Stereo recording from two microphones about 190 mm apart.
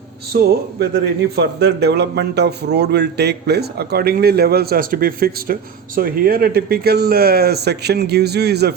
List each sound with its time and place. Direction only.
0.3 s a man's voice: 60° right (ahead or behind)